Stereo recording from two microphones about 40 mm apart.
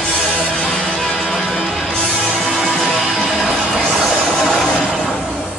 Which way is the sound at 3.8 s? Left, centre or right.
Centre.